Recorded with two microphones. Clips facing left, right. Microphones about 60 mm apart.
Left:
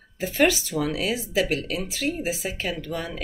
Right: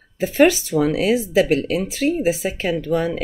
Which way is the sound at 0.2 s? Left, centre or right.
Right.